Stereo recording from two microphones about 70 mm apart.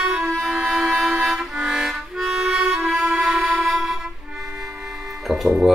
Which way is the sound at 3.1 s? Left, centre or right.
Centre.